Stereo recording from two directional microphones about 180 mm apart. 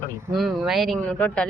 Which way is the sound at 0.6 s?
Centre (ahead or behind).